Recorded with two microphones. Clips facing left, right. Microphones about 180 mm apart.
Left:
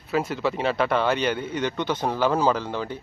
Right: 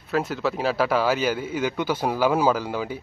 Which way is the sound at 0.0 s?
Centre (ahead or behind).